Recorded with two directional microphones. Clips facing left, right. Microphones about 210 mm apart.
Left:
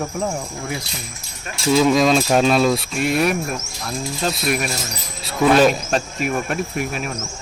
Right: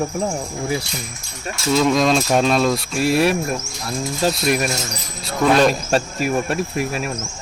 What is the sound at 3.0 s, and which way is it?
Speech, 30° right (ahead or behind).